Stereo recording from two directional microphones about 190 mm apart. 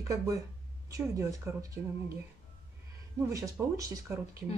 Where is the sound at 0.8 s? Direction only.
15° right (ahead or behind).